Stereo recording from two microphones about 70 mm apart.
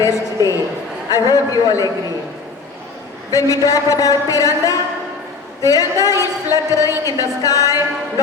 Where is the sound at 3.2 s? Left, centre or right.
Left.